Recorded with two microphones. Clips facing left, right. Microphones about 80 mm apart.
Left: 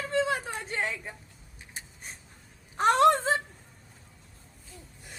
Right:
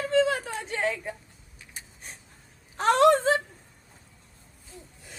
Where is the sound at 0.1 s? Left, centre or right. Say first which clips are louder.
Right 4 dB; centre.